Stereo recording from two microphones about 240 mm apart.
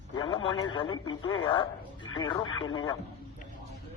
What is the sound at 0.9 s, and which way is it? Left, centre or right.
Speech, left.